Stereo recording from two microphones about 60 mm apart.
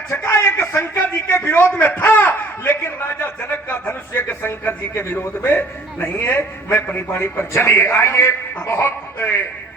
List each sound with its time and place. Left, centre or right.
0.2 s a man's voice: left
8.6 s speech: left
9.1 s a man's voice: left